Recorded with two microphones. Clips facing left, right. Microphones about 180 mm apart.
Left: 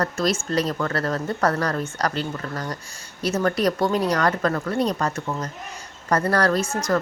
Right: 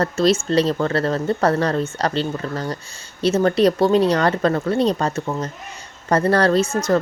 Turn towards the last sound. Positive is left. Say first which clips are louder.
# right 5 dB
turn(degrees=-25)  # may be behind; listen again after turning